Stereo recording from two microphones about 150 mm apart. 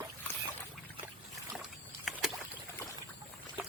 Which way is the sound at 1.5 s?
5° right (ahead or behind).